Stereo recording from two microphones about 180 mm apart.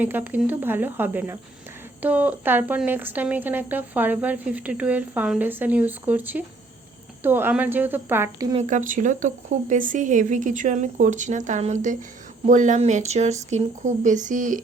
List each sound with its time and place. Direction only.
0.0 s a woman's voice: 10° right (ahead or behind)
8.5 s speech: 45° right (ahead or behind)